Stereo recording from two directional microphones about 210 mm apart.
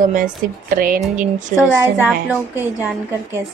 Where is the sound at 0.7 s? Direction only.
40° right (ahead or behind).